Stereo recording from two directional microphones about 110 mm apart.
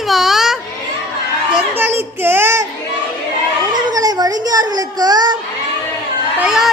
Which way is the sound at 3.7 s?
40° right (ahead or behind).